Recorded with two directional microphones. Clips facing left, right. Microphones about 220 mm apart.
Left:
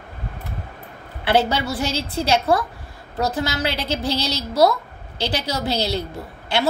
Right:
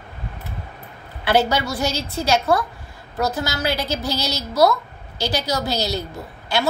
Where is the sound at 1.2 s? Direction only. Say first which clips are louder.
Even; 30° left (ahead or behind).